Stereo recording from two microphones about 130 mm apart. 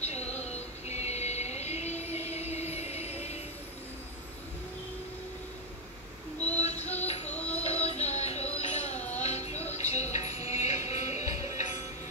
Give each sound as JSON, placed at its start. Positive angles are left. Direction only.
{"t": 0.0, "sound": "music", "side_deg": 55}
{"t": 6.6, "sound": "music", "side_deg": 60}
{"t": 7.3, "sound": "music", "side_deg": 10}
{"t": 7.6, "sound": "music", "side_deg": 55}